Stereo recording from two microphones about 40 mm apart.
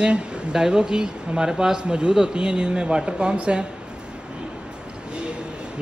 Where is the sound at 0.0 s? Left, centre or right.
Centre.